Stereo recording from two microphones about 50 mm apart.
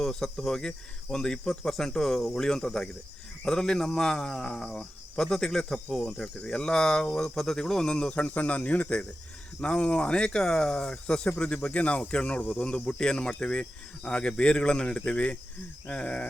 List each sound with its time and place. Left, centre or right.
0.0 s speech: centre